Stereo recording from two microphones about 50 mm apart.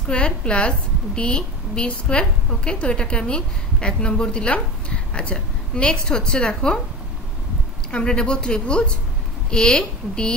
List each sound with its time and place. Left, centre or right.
0.1 s a woman's voice: left
7.9 s a woman's voice: centre